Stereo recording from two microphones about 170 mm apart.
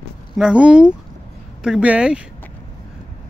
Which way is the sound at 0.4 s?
5° right (ahead or behind).